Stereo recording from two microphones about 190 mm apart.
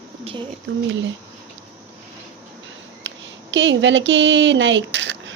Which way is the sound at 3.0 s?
75° right (ahead or behind).